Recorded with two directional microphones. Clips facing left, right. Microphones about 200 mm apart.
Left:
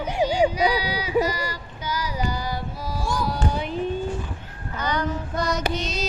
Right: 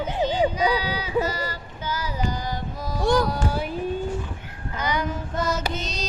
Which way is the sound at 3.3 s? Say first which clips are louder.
Even; 5° right (ahead or behind).